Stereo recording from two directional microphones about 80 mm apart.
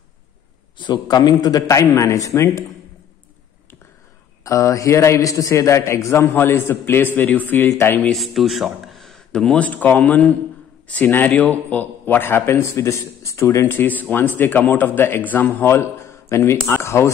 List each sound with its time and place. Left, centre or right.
0.7 s a man's voice: left
1.7 s a man's voice: left
4.5 s a man's voice: left
8.1 s a man's voice: centre; by 13.7 s left
13.7 s a man's voice: left